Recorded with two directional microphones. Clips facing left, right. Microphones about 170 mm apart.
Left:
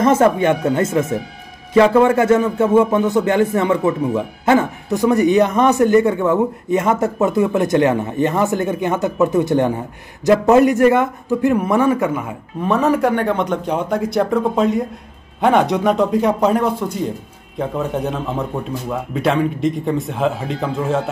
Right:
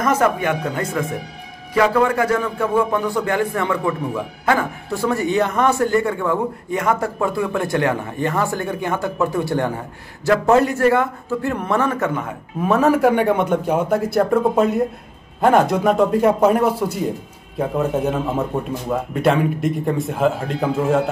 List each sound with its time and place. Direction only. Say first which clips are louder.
0.0 s a man's voice: left 5 dB; 25° left (ahead or behind); by 12.4 s 10° left (ahead or behind)
12.6 s a man's voice: right 1 dB; centre (ahead or behind)